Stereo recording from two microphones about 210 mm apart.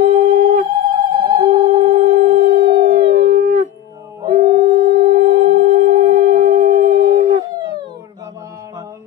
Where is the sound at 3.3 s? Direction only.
35° right (ahead or behind).